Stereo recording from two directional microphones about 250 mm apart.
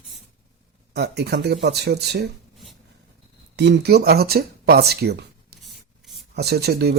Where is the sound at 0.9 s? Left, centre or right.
Right.